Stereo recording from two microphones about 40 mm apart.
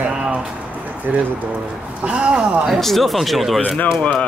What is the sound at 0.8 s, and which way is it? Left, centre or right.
Speech, right.